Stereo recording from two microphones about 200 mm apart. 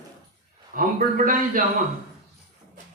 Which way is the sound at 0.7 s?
45° right (ahead or behind).